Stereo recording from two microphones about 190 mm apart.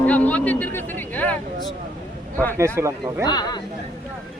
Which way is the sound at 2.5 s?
15° right (ahead or behind).